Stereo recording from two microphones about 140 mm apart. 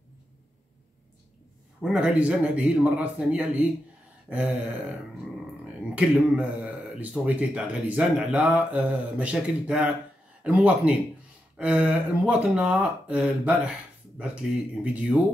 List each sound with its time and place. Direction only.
1.8 s speech: 5° right (ahead or behind)
5.9 s speech: 5° right (ahead or behind)